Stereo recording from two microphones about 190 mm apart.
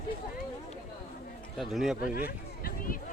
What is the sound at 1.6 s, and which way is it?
Speech, centre (ahead or behind).